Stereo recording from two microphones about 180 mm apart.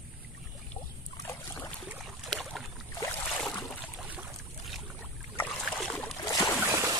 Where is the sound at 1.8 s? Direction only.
Centre (ahead or behind).